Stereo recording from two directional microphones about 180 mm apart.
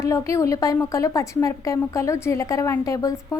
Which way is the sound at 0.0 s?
15° left (ahead or behind).